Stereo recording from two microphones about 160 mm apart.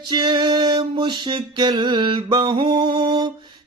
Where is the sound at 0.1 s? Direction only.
30° right (ahead or behind).